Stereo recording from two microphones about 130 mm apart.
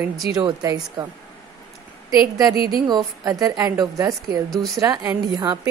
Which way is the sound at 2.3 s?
30° right (ahead or behind).